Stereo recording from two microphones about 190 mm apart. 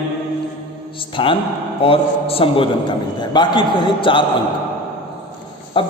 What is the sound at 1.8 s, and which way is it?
A man's voice, 30° left (ahead or behind).